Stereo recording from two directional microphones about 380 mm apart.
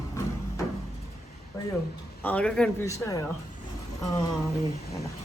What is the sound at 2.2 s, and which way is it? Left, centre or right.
A woman's voice, centre.